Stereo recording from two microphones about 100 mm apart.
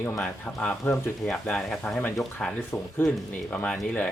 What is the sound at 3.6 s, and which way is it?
Speech, 15° left (ahead or behind).